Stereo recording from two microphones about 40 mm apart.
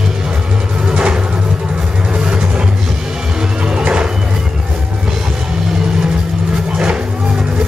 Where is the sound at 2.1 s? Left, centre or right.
Right.